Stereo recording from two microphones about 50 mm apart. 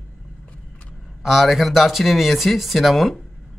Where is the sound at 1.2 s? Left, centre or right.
Centre.